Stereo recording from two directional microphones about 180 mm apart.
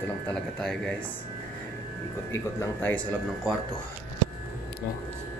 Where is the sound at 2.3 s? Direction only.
10° left (ahead or behind).